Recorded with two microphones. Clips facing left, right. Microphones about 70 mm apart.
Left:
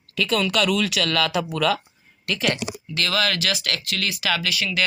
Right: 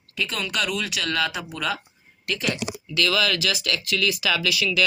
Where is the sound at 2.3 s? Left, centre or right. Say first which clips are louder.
Left 3 dB; left.